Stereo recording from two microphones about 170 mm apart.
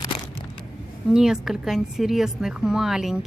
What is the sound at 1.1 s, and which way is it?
A woman's voice, 5° right (ahead or behind).